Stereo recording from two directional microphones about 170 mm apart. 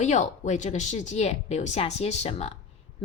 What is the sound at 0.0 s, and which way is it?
A woman's voice, 45° left (ahead or behind).